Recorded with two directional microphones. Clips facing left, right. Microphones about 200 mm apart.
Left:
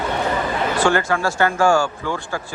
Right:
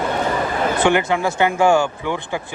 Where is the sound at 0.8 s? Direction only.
20° right (ahead or behind).